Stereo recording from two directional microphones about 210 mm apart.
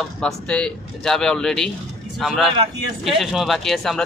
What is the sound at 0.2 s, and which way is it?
Speech, 5° left (ahead or behind).